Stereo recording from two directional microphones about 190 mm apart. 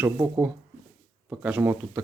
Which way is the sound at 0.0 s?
10° right (ahead or behind).